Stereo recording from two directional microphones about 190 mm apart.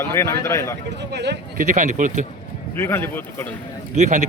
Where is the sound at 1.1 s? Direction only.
65° right (ahead or behind).